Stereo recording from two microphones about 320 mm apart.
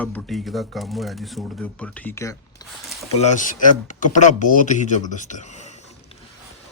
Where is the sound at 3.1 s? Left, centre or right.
Left.